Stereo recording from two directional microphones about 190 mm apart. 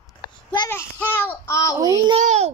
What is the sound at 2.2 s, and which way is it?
Speech, 35° right (ahead or behind).